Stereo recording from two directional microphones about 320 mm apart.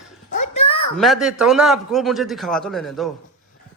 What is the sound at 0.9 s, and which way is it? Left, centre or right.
A man's voice, centre.